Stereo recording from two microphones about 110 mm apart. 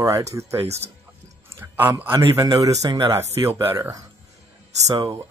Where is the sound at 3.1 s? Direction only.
20° right (ahead or behind).